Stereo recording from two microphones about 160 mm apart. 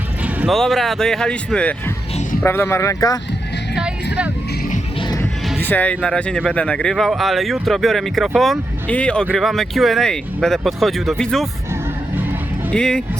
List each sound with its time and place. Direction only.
0.2 s vehicle: 10° right (ahead or behind)
0.5 s speech: centre (ahead or behind); by 3.2 s 20° left (ahead or behind)
3.8 s vehicle: 5° right (ahead or behind)
4.9 s music: 25° left (ahead or behind)
5.5 s speech: 10° left (ahead or behind)
12.7 s speech: 5° left (ahead or behind)